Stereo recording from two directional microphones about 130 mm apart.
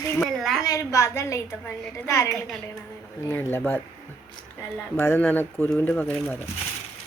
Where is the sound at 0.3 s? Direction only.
Centre (ahead or behind).